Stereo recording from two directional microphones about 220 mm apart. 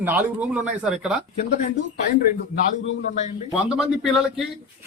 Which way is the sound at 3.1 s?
30° left (ahead or behind).